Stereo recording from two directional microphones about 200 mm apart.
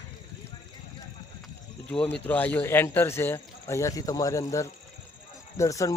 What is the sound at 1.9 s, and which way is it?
Speech, 5° left (ahead or behind).